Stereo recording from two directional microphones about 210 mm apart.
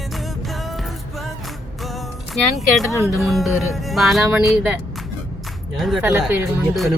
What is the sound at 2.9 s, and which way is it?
Speech, 15° left (ahead or behind).